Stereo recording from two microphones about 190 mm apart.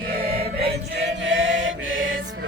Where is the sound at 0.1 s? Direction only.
55° right (ahead or behind).